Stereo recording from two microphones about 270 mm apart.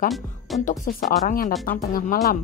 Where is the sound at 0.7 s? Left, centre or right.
Left.